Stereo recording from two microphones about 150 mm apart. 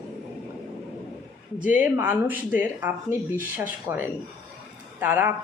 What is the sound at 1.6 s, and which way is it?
Speech, 10° right (ahead or behind).